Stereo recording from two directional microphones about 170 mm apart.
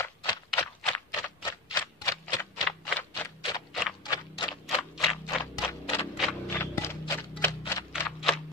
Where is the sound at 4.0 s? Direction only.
25° left (ahead or behind).